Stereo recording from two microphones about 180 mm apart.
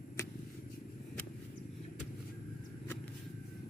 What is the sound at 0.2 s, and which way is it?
Vehicle, 15° left (ahead or behind).